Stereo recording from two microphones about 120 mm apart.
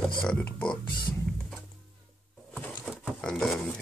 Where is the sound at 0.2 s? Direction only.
10° left (ahead or behind).